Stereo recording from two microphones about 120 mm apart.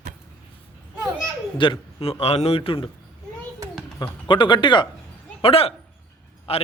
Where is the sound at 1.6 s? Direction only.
45° left (ahead or behind).